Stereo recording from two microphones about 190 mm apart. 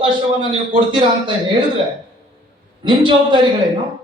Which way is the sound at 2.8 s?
25° right (ahead or behind).